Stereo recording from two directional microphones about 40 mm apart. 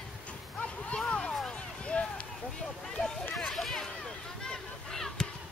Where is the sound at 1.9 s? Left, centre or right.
Left.